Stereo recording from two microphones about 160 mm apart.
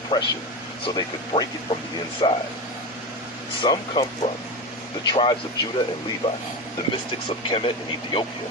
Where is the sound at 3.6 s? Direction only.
30° left (ahead or behind).